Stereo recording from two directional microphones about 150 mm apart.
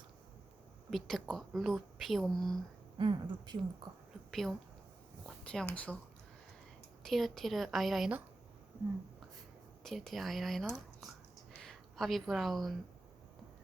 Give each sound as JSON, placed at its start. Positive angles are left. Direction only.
{"t": 0.9, "sound": "a woman's voice", "side_deg": 0}
{"t": 3.0, "sound": "speech", "side_deg": -30}
{"t": 4.3, "sound": "speech", "side_deg": 0}
{"t": 5.2, "sound": "a sound", "side_deg": 5}
{"t": 5.7, "sound": "a woman's voice", "side_deg": 10}
{"t": 7.0, "sound": "a woman's voice", "side_deg": 0}
{"t": 9.8, "sound": "a woman's voice", "side_deg": 0}